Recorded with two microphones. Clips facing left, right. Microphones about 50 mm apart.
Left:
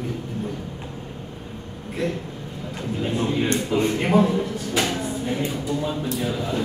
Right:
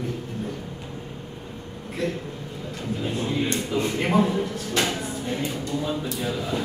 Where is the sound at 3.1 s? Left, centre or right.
Centre.